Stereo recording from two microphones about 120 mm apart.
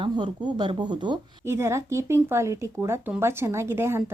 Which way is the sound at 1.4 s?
20° right (ahead or behind).